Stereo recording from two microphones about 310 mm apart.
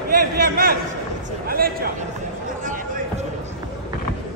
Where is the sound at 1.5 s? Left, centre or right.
Right.